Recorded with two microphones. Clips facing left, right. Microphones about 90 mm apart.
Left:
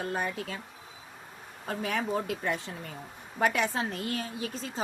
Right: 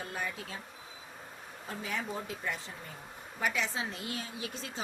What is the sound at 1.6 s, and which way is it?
A woman's voice, 65° left (ahead or behind).